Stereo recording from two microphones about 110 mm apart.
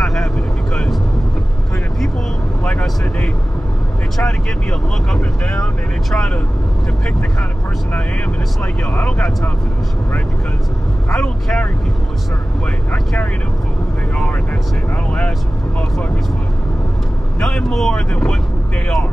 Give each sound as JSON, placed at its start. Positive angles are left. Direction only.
{"t": 0.0, "sound": "vehicle", "side_deg": 5}
{"t": 2.6, "sound": "vehicle", "side_deg": 10}
{"t": 4.2, "sound": "speech", "side_deg": 5}
{"t": 8.9, "sound": "speech", "side_deg": 10}
{"t": 11.1, "sound": "speech", "side_deg": 5}
{"t": 12.9, "sound": "speech", "side_deg": 5}
{"t": 15.0, "sound": "speech", "side_deg": 10}
{"t": 17.4, "sound": "speech", "side_deg": 5}